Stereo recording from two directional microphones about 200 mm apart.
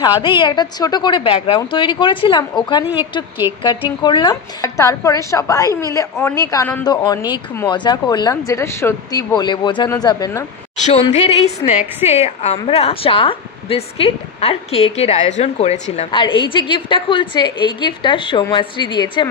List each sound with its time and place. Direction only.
0.4 s a woman's voice: 20° left (ahead or behind)
5.7 s a woman's voice: 15° right (ahead or behind)
5.9 s a woman's voice: 15° left (ahead or behind)
10.9 s a woman's voice: 30° left (ahead or behind)